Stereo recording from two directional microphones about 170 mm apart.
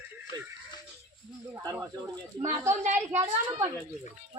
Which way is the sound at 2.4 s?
45° right (ahead or behind).